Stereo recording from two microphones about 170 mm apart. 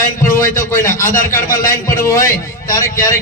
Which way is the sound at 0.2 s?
55° left (ahead or behind).